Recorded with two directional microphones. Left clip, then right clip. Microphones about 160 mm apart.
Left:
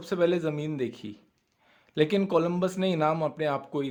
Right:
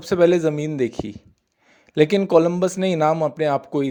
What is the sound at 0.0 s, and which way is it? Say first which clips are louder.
A man's voice: right 9 dB; 45° right (ahead or behind).